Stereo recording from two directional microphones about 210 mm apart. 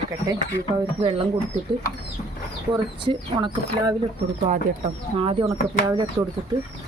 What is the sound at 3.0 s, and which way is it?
Speech, 20° right (ahead or behind).